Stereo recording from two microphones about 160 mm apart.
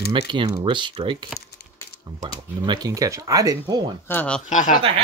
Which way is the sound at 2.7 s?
25° right (ahead or behind).